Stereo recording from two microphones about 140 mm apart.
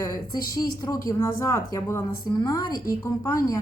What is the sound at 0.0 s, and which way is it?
A woman's voice, 25° left (ahead or behind).